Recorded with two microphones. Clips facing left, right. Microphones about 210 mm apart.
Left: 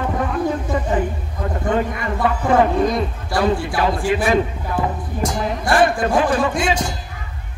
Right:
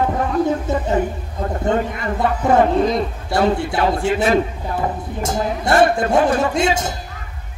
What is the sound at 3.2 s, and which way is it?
Speech, 25° right (ahead or behind).